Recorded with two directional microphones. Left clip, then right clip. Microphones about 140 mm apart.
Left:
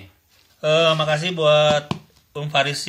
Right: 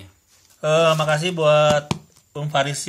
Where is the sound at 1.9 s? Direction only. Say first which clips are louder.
Right 1 dB; 20° right (ahead or behind).